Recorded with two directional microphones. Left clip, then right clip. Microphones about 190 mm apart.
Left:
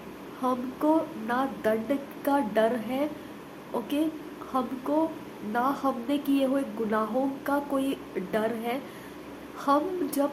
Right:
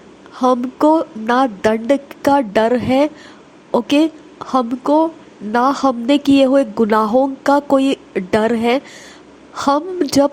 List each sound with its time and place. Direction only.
0.4 s a woman's voice: 45° right (ahead or behind)